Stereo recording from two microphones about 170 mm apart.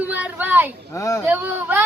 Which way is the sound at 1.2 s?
10° right (ahead or behind).